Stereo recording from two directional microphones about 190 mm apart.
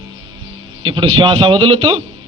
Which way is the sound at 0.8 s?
25° right (ahead or behind).